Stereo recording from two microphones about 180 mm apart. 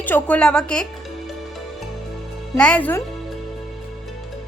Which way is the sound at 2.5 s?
5° left (ahead or behind).